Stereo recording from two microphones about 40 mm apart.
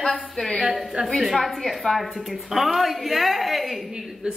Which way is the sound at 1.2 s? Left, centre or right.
Centre.